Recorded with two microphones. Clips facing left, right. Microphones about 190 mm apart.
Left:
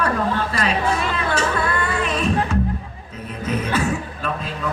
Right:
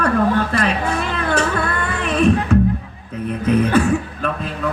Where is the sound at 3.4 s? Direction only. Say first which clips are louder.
Right 7 dB; 60° right (ahead or behind).